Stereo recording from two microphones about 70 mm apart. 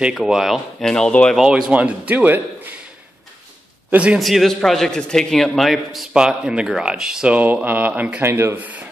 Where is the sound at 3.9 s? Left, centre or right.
Right.